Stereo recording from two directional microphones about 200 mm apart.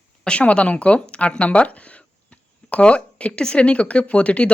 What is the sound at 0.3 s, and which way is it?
Speech, 5° left (ahead or behind).